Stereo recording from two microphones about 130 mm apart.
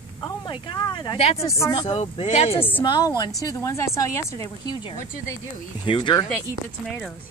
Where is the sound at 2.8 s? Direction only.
35° left (ahead or behind).